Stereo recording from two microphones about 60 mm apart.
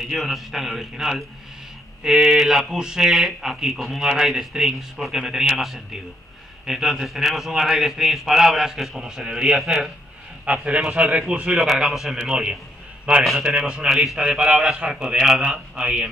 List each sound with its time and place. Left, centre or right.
0.0 s a man's voice: centre
10.4 s a man's voice: centre